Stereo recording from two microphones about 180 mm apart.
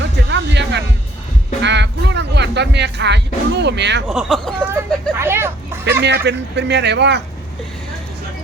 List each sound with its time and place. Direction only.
0.0 s music: 80° right
1.6 s speech: 75° right (ahead or behind)
4.1 s speech: centre (ahead or behind)
4.6 s a sound: 15° right (ahead or behind)
6.0 s speech: 70° right (ahead or behind)